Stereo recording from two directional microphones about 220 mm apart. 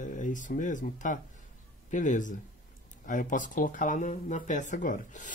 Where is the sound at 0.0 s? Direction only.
35° left (ahead or behind).